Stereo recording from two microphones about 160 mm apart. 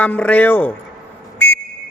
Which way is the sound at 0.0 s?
10° left (ahead or behind).